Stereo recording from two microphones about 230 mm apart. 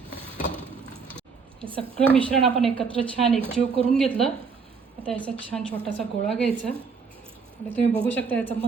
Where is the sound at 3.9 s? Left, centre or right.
Centre.